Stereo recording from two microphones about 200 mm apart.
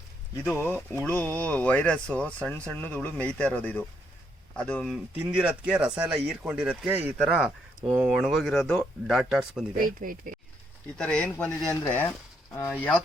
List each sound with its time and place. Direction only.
0.4 s speech: 10° left (ahead or behind)
5.2 s speech: 5° right (ahead or behind)
9.7 s speech: 45° right (ahead or behind)
10.9 s speech: 5° left (ahead or behind)